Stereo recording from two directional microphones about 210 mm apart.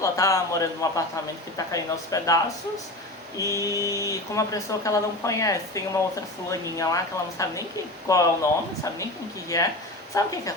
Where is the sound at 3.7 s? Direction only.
15° right (ahead or behind).